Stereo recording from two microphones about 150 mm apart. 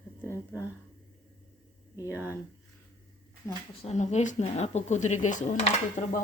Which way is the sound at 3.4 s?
15° left (ahead or behind).